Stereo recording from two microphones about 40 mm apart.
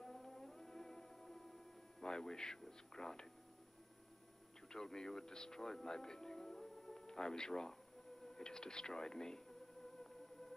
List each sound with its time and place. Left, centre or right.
0.0 s music: centre
2.6 s speech: centre
4.6 s speech: centre